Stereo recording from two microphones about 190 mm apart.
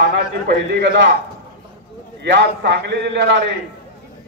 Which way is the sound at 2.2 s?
60° right (ahead or behind).